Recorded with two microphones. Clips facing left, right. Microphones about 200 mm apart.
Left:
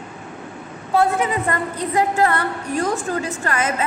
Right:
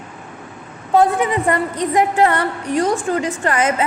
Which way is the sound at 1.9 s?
20° right (ahead or behind).